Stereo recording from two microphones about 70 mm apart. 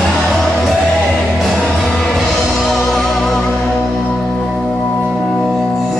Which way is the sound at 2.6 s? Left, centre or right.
Centre.